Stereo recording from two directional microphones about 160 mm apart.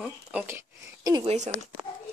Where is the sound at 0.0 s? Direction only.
5° right (ahead or behind).